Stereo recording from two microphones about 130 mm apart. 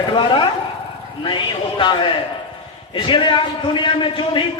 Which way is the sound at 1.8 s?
40° left (ahead or behind).